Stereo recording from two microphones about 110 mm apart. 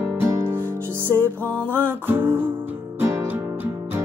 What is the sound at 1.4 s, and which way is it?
Music, 10° left (ahead or behind).